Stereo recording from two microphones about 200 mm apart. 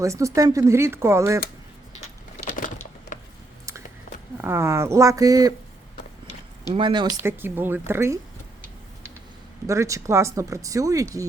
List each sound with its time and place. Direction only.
0.0 s speech: 15° right (ahead or behind)
2.0 s a sound: 35° left (ahead or behind)
4.4 s speech: 10° right (ahead or behind)
6.7 s speech: 25° right (ahead or behind)
7.2 s speech: 10° right (ahead or behind)
9.6 s speech: 15° right (ahead or behind)